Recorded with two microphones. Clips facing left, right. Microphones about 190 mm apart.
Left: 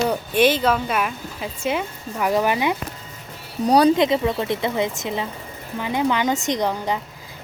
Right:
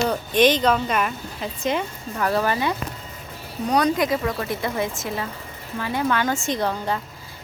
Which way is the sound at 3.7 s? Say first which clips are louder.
Left 5 dB; 30° left (ahead or behind).